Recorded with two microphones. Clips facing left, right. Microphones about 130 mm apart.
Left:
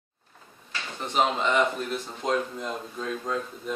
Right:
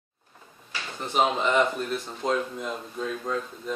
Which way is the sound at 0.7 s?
5° right (ahead or behind).